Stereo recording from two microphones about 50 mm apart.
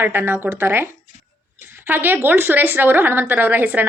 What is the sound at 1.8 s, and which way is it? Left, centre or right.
A woman's voice, right.